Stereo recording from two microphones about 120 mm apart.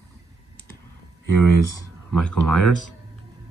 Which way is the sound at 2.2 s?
10° left (ahead or behind).